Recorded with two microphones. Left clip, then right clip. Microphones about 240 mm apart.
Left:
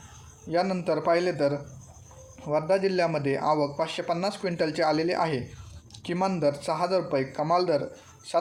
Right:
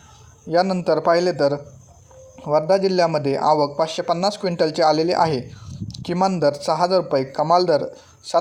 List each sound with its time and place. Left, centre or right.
0.4 s a man's voice: right